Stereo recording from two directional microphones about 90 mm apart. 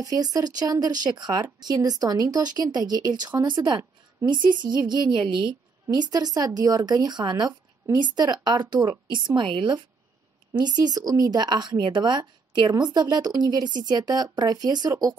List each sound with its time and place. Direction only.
0.0 s a woman's voice: 45° right (ahead or behind); by 9.8 s 65° right (ahead or behind)
10.6 s speech: 50° right (ahead or behind)